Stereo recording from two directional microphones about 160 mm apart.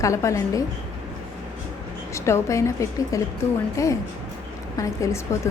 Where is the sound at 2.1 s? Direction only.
20° left (ahead or behind).